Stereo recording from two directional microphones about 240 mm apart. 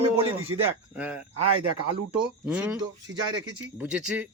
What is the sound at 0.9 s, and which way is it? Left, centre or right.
Speech, centre.